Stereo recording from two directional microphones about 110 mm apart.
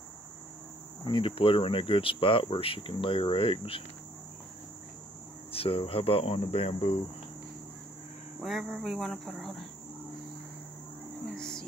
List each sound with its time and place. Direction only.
1.0 s cricket: 50° left (ahead or behind)
5.5 s cricket: 60° left (ahead or behind)
8.4 s speech: 5° right (ahead or behind)
11.3 s cricket: 5° left (ahead or behind)